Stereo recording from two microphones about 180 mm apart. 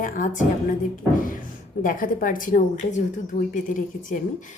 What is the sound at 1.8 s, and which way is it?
A woman's voice, 50° left (ahead or behind).